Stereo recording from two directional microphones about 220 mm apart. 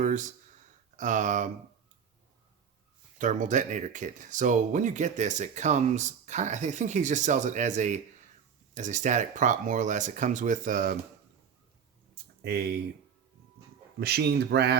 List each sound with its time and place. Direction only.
0.0 s a sound: 35° right (ahead or behind)
0.9 s speech: 35° right (ahead or behind)
3.2 s speech: 35° right (ahead or behind)
12.4 s speech: 45° right (ahead or behind)
14.0 s speech: 45° right (ahead or behind)